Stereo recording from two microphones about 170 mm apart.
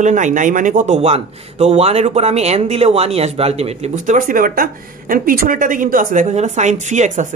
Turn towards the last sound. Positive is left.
turn(degrees=-45)  # may be behind; listen again after turning